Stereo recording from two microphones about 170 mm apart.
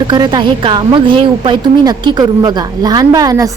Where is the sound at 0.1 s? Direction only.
25° right (ahead or behind).